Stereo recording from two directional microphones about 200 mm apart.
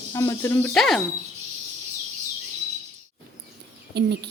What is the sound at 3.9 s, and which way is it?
Speech, 55° right (ahead or behind).